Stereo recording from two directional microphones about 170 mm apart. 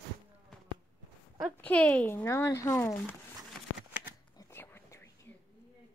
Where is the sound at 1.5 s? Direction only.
10° left (ahead or behind).